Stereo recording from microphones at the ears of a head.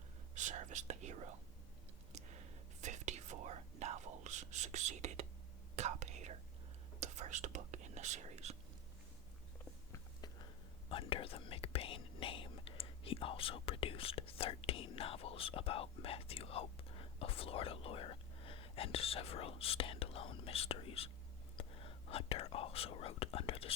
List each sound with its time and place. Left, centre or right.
0.3 s whispering: right
9.9 s whispering: left
21.6 s speech: left